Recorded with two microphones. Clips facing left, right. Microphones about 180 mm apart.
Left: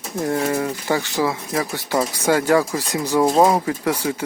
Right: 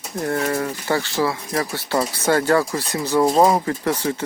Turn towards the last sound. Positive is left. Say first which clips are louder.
# even
turn(degrees=10)  # may be behind; listen again after turning